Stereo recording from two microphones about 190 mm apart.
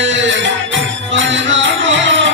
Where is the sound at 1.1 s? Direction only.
75° right (ahead or behind).